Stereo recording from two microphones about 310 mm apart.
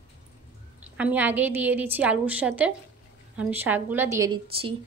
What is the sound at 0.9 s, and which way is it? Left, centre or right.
A woman's voice, centre.